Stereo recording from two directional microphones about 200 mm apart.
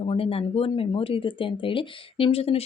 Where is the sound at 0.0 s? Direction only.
30° left (ahead or behind).